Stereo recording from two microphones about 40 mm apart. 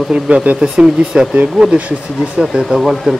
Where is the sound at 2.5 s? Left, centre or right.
Right.